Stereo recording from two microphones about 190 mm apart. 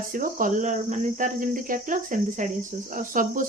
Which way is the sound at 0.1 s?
45° right (ahead or behind).